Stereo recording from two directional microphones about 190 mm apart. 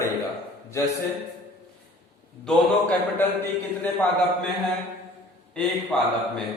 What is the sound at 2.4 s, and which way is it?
Speech, 5° left (ahead or behind).